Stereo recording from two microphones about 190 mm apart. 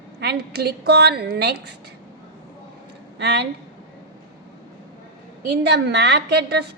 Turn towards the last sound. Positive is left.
turn(degrees=-60)  # may be behind; listen again after turning